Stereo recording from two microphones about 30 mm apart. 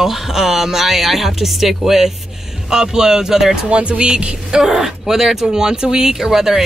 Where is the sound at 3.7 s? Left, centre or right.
Right.